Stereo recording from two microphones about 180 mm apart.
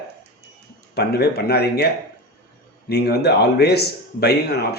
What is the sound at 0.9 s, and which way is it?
Speech, 60° left (ahead or behind).